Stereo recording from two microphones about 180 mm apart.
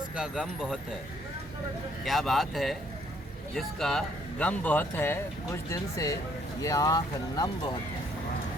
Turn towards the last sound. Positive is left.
turn(degrees=20)  # may be behind; listen again after turning